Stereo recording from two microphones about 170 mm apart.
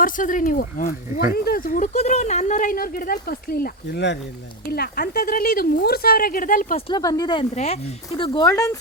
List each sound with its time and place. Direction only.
0.0 s speech: 50° left (ahead or behind); by 4.2 s 85° left
4.6 s speech: 65° left (ahead or behind)
6.7 s speech: 30° left (ahead or behind)
7.0 s speech: 20° left (ahead or behind)
7.5 s speech: 40° left (ahead or behind)
8.4 s speech: 20° left (ahead or behind)